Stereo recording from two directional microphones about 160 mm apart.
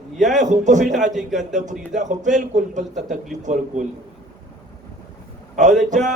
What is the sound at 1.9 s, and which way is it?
Speech, 50° right (ahead or behind).